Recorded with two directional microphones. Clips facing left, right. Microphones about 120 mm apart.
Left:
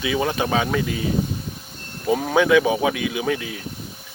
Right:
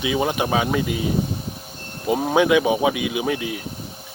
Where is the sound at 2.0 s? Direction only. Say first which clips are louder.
Even; 20° right (ahead or behind).